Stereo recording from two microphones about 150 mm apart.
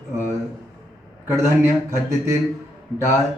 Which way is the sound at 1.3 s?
20° right (ahead or behind).